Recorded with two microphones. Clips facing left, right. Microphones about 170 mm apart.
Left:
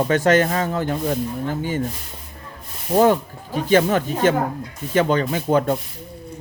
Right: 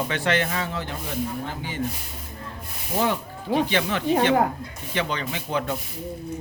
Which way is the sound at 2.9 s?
50° left (ahead or behind).